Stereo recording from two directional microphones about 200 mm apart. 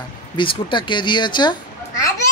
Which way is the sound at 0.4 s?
25° left (ahead or behind).